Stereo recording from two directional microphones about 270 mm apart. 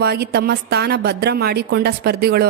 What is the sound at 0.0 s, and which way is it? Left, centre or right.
Speech, right.